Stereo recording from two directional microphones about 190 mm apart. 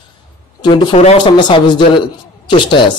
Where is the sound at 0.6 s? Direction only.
25° left (ahead or behind).